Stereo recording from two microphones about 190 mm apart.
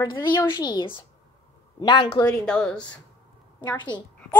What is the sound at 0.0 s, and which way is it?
A woman's voice, 20° left (ahead or behind).